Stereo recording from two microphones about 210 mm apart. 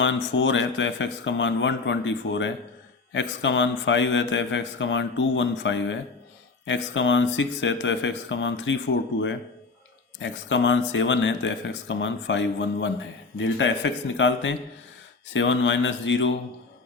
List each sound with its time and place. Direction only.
0.0 s speech: 60° left (ahead or behind)
10.2 s speech: 60° left (ahead or behind)